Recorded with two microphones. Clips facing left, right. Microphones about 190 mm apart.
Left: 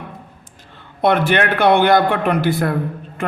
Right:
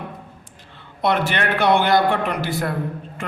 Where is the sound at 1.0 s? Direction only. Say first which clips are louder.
Left 5 dB; 55° left (ahead or behind).